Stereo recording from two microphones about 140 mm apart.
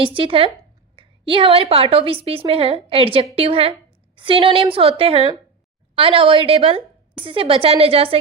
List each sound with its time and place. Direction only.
0.0 s a woman's voice: 40° right (ahead or behind)